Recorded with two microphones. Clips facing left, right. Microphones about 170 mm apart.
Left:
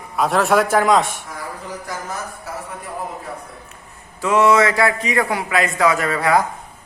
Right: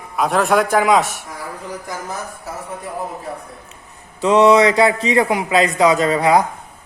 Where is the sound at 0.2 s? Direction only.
Centre (ahead or behind).